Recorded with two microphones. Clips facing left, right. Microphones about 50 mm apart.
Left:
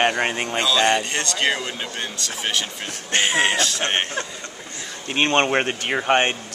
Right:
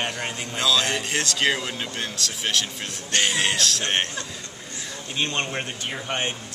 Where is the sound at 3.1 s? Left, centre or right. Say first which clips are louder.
Left 4 dB; left.